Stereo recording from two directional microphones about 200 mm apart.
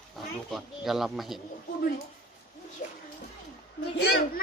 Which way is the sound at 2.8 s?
40° left (ahead or behind).